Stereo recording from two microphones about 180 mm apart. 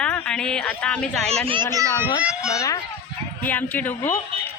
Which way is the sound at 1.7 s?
20° right (ahead or behind).